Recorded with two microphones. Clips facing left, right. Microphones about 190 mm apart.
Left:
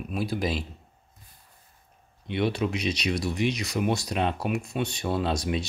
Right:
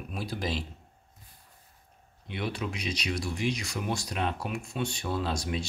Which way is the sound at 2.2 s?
25° left (ahead or behind).